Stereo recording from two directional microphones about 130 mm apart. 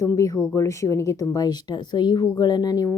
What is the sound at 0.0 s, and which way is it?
A woman's voice, 25° left (ahead or behind).